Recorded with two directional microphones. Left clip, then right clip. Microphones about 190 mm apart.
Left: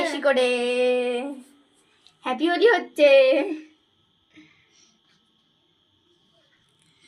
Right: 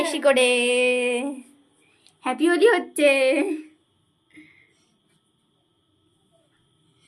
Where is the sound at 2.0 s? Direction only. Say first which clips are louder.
Right 2 dB; 15° right (ahead or behind).